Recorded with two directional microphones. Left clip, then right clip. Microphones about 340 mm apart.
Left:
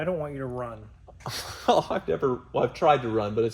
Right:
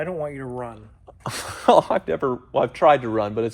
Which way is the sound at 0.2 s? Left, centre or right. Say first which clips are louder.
Right 3 dB; right.